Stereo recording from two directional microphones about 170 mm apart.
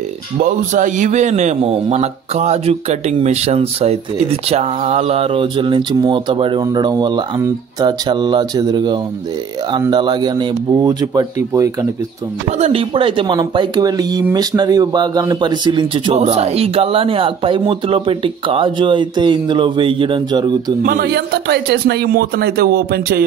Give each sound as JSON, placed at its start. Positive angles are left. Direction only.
{"t": 0.4, "sound": "a man's voice", "side_deg": -50}
{"t": 12.4, "sound": "speech", "side_deg": -40}
{"t": 20.8, "sound": "a man's voice", "side_deg": -60}